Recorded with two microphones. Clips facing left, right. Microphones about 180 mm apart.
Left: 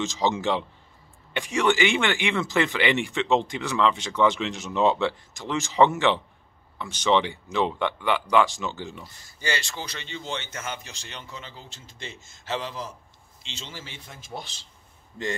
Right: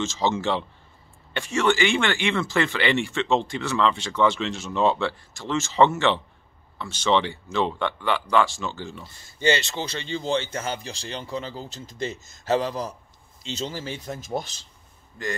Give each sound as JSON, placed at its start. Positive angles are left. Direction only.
{"t": 0.0, "sound": "speech", "side_deg": 15}
{"t": 9.0, "sound": "a man's voice", "side_deg": -25}
{"t": 15.2, "sound": "a man's voice", "side_deg": 25}